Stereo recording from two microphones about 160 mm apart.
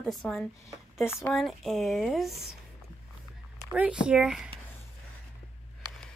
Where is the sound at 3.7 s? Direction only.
5° right (ahead or behind).